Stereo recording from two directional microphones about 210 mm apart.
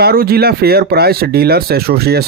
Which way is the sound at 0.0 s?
45° right (ahead or behind).